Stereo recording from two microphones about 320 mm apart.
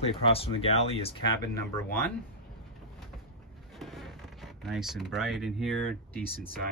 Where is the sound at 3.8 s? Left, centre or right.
Centre.